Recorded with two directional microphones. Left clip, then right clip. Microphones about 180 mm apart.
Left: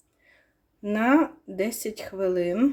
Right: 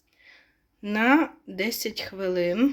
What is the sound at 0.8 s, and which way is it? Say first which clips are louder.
Speech: right 1 dB; centre (ahead or behind).